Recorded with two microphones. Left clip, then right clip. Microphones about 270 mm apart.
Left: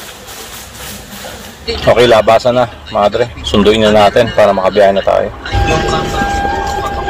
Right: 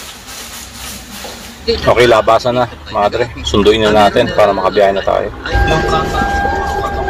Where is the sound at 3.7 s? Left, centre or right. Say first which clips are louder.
Left 1 dB; left.